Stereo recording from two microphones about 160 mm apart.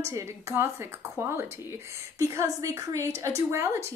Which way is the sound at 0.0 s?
15° right (ahead or behind).